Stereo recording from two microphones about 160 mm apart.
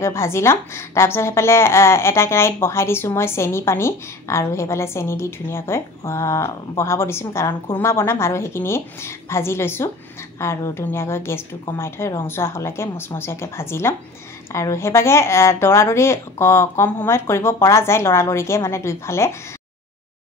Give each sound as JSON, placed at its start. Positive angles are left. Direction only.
{"t": 0.0, "sound": "a woman's voice", "side_deg": 15}